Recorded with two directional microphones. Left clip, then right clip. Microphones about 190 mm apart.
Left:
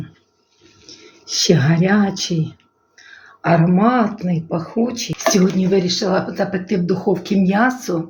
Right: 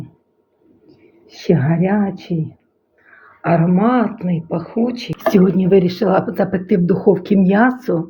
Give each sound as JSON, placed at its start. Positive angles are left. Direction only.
{"t": 1.4, "sound": "speech", "side_deg": 0}
{"t": 3.4, "sound": "speech", "side_deg": 0}
{"t": 5.3, "sound": "speech", "side_deg": -50}